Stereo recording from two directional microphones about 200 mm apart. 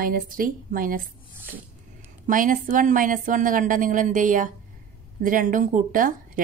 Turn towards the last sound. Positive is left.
turn(degrees=-45)  # may be behind; listen again after turning